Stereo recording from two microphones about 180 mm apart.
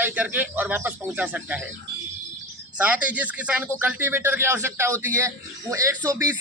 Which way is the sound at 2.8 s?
10° right (ahead or behind).